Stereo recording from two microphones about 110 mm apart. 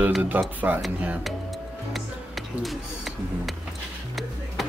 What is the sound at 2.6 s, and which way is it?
Speech, centre (ahead or behind).